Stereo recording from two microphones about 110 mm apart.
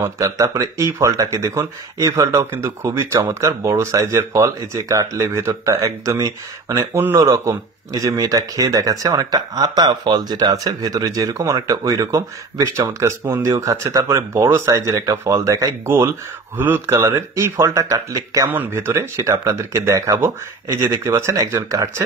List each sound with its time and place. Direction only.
0.0 s speech: 30° right (ahead or behind)
18.5 s speech: 20° right (ahead or behind)